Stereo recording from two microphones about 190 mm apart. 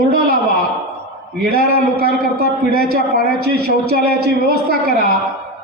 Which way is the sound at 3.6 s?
55° right (ahead or behind).